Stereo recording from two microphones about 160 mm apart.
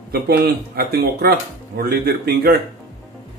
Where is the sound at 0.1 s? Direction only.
75° right (ahead or behind).